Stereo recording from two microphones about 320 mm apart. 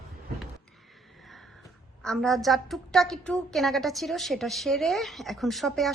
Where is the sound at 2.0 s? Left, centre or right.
Centre.